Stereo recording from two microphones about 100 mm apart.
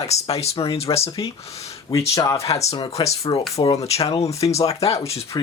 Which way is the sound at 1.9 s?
30° left (ahead or behind).